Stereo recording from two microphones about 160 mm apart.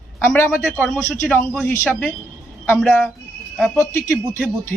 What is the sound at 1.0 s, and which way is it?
Speech, 15° left (ahead or behind).